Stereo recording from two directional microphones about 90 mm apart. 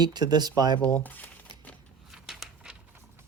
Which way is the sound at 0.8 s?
20° left (ahead or behind).